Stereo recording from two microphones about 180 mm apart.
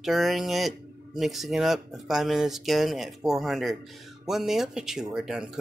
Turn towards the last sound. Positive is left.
turn(degrees=-5)  # may be behind; listen again after turning